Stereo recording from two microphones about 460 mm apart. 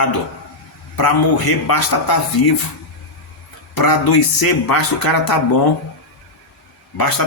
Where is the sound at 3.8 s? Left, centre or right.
Left.